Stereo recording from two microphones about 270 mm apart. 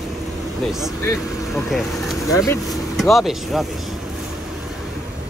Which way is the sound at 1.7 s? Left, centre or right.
Centre.